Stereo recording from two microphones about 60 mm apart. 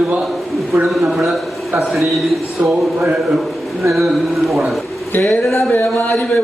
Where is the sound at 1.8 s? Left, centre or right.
Centre.